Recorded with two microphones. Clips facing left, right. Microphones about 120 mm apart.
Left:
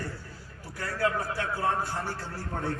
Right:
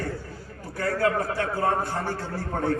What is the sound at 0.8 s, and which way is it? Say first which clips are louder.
A man's voice: right 5 dB; 50° right (ahead or behind).